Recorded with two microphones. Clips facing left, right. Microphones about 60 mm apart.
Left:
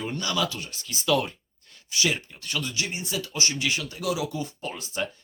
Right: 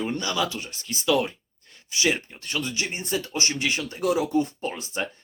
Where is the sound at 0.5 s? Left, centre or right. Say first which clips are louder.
Right 2 dB; right.